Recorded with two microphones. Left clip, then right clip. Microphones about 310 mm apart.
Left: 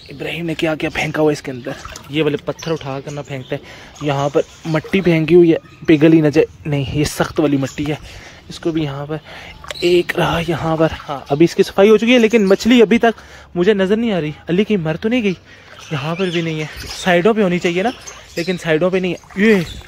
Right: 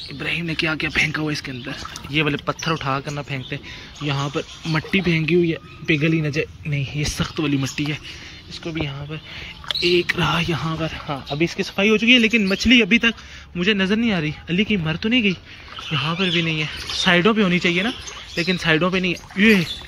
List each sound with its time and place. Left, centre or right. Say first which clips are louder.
0.2 s speech: left 3 dB; centre
8.6 s speech: left 8 dB; left
9.9 s speech: left 4 dB; centre